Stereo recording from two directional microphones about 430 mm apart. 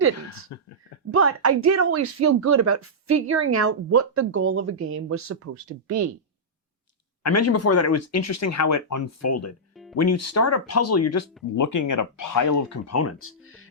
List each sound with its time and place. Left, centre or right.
0.5 s speech: left
1.1 s speech: right
7.2 s speech: left